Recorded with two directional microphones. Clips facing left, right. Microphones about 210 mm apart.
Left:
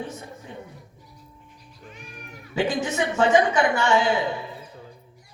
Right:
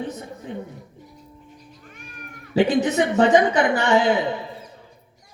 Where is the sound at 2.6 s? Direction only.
20° right (ahead or behind).